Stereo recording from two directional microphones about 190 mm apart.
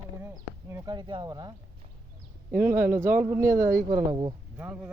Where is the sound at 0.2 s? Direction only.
15° right (ahead or behind).